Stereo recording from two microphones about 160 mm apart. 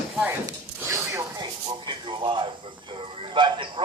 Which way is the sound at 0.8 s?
15° right (ahead or behind).